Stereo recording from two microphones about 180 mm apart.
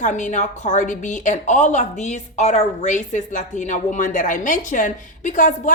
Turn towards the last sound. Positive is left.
turn(degrees=45)  # may be behind; listen again after turning